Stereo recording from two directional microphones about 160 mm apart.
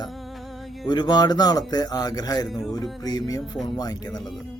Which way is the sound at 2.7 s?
25° left (ahead or behind).